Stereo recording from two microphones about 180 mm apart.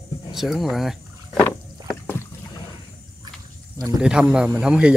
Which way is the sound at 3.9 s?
5° right (ahead or behind).